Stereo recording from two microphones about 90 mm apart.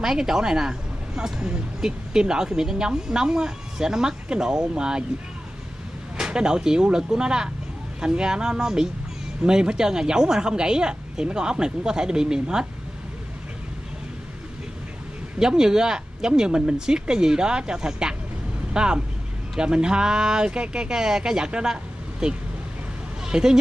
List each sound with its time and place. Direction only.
0.0 s speech: 5° right (ahead or behind)
6.1 s speech: 10° right (ahead or behind)
15.3 s speech: 5° right (ahead or behind)